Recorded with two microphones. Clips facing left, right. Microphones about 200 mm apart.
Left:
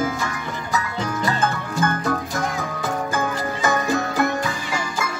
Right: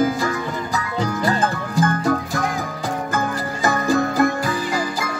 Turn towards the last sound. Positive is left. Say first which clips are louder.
# right 3 dB
turn(degrees=-40)  # may be behind; listen again after turning